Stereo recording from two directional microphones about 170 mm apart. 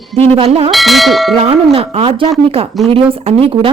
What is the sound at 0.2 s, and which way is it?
Speech, 35° right (ahead or behind).